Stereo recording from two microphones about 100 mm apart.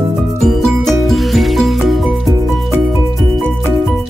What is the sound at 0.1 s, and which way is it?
Music, centre (ahead or behind).